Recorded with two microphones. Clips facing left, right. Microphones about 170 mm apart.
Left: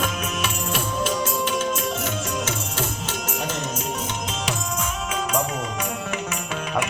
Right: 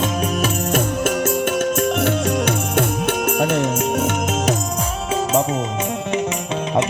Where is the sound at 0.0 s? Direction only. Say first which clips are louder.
Right 6 dB; 35° right (ahead or behind).